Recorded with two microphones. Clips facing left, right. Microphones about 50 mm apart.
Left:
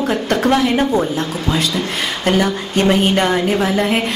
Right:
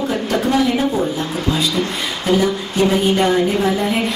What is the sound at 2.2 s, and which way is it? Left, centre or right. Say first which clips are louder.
A woman's voice: even; left.